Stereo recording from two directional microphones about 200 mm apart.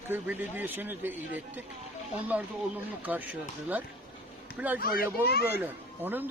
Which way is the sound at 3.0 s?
10° right (ahead or behind).